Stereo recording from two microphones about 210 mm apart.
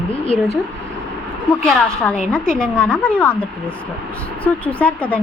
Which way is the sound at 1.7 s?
5° left (ahead or behind).